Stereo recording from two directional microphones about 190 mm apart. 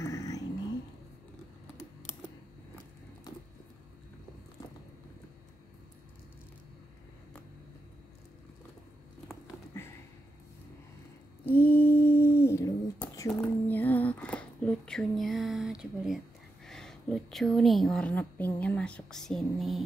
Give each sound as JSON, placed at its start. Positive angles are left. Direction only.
{"t": 0.0, "sound": "vehicle", "side_deg": 15}
{"t": 11.4, "sound": "a sound", "side_deg": 10}
{"t": 16.6, "sound": "a woman's voice", "side_deg": 0}